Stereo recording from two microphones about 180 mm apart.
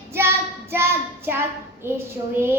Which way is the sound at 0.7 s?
15° right (ahead or behind).